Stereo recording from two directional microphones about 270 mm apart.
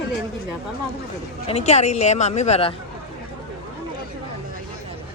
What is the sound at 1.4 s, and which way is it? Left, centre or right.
Speech, left.